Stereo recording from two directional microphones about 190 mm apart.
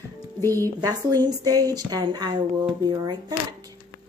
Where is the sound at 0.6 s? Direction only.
20° right (ahead or behind).